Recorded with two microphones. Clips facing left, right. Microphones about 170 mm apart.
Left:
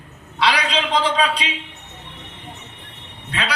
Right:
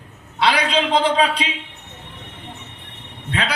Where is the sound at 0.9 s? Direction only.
25° right (ahead or behind).